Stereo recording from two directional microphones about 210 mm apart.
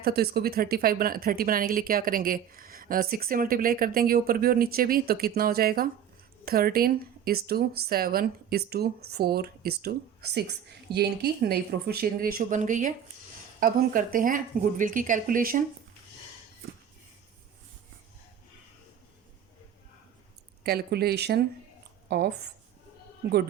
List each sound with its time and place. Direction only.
0.0 s a woman's voice: 50° right (ahead or behind)
20.7 s speech: 50° right (ahead or behind)